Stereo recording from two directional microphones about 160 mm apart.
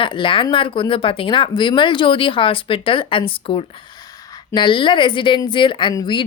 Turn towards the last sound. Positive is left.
turn(degrees=30)  # may be behind; listen again after turning